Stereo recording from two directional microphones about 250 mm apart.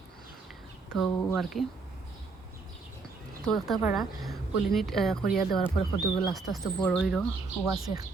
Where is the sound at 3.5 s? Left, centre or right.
Centre.